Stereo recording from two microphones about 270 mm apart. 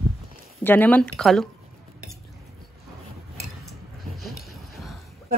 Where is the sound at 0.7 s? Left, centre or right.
Centre.